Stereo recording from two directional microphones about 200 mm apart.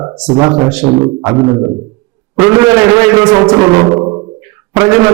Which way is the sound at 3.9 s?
20° right (ahead or behind).